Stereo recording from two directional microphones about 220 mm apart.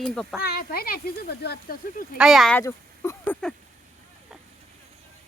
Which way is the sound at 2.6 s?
15° left (ahead or behind).